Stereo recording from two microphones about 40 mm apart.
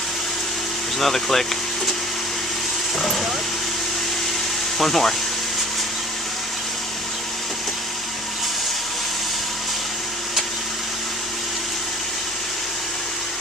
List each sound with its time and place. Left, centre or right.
0.9 s speech: centre
3.0 s speech: centre
4.8 s speech: centre